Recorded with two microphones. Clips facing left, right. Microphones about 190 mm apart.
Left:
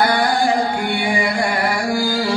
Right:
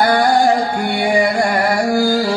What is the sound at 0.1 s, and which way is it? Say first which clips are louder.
Music: right 4 dB; 40° right (ahead or behind).